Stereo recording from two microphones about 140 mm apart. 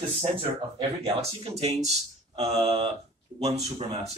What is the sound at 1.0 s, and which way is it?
Speech, 45° right (ahead or behind).